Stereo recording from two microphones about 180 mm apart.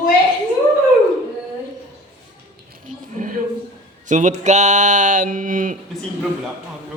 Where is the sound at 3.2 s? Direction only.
50° right (ahead or behind).